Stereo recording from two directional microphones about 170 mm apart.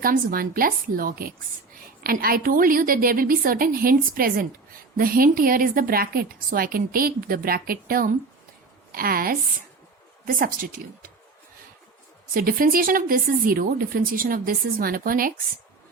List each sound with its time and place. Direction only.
0.0 s a woman's voice: 60° right (ahead or behind)
12.3 s a woman's voice: 55° right (ahead or behind)